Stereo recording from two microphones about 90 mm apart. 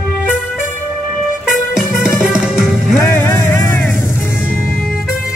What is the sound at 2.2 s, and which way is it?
Music, 5° right (ahead or behind).